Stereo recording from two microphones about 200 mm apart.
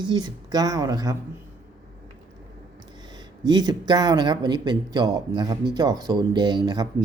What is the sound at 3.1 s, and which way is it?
A man's voice, 20° right (ahead or behind).